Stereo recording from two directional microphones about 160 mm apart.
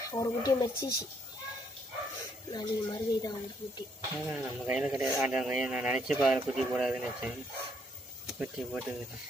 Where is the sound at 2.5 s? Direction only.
25° left (ahead or behind).